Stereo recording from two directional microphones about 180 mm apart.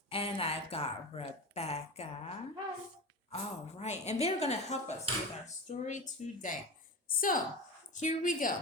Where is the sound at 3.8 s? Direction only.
40° left (ahead or behind).